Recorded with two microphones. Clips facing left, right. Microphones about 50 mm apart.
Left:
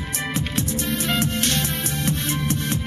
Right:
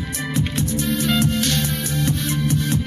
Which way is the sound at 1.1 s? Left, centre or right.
Left.